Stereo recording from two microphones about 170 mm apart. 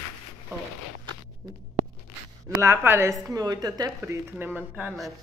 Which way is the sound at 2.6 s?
15° right (ahead or behind).